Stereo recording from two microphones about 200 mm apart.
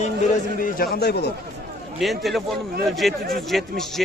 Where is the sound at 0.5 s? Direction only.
45° left (ahead or behind).